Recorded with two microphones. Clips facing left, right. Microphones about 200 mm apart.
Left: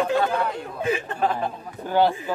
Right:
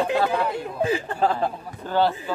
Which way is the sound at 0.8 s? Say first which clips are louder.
Right 1 dB; 35° right (ahead or behind).